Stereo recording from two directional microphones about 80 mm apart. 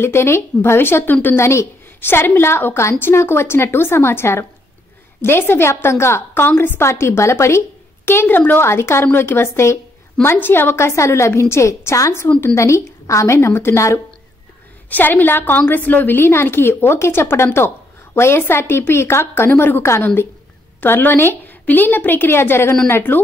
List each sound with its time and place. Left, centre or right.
0.0 s a woman's voice: left
14.9 s a woman's voice: left